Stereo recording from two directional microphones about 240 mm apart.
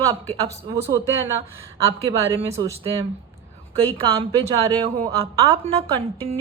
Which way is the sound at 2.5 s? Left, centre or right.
Right.